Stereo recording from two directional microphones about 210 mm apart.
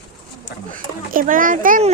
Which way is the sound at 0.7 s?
40° right (ahead or behind).